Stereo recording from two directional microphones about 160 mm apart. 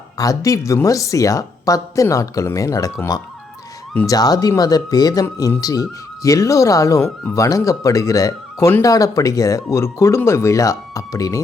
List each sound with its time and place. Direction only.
0.2 s speech: 20° left (ahead or behind)
3.9 s speech: 20° left (ahead or behind)